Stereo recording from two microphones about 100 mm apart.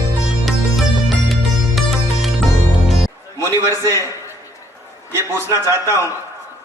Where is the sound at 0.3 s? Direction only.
Centre (ahead or behind).